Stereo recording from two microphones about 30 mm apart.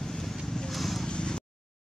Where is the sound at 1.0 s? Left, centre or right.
Left.